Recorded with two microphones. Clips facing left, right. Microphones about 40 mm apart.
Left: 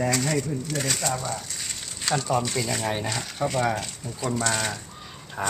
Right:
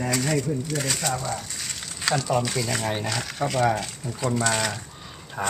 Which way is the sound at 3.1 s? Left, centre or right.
Right.